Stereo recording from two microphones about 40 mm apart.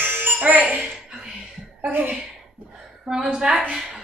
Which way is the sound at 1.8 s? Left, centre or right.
Right.